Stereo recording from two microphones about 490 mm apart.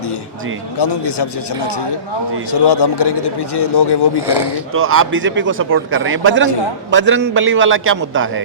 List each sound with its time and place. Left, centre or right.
0.8 s speech: left
4.7 s a man's voice: right